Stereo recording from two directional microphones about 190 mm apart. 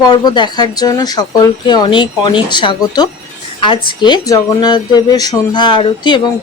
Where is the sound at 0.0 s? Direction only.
20° left (ahead or behind).